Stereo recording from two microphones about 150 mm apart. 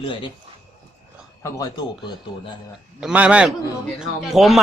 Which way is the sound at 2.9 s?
5° right (ahead or behind).